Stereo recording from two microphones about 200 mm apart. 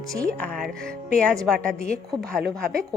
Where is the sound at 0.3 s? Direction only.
5° left (ahead or behind).